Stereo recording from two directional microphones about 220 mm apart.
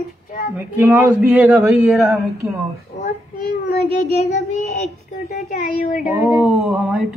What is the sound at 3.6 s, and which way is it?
Child singing, 45° left (ahead or behind).